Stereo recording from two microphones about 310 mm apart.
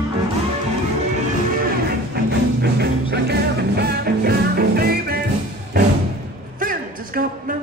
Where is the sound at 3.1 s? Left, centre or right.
Right.